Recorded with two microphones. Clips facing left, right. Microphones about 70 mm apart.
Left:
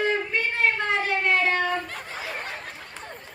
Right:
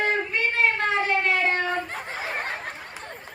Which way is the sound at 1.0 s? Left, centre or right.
Right.